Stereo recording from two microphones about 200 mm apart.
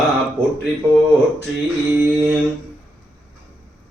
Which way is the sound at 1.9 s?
10° right (ahead or behind).